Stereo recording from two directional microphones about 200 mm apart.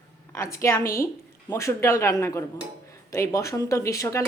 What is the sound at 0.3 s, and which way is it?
Speech, 15° left (ahead or behind).